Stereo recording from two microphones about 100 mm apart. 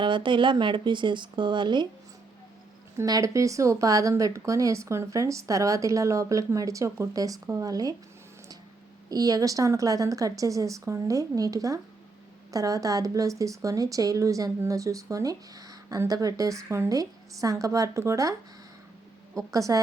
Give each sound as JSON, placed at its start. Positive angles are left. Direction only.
{"t": 0.0, "sound": "speech", "side_deg": -55}
{"t": 3.0, "sound": "a woman's voice", "side_deg": -35}
{"t": 9.0, "sound": "a woman's voice", "side_deg": -40}